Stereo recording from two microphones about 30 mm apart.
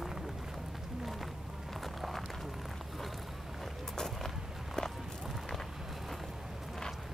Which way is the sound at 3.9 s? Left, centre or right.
Centre.